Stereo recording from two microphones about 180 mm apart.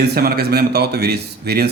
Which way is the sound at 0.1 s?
60° right (ahead or behind).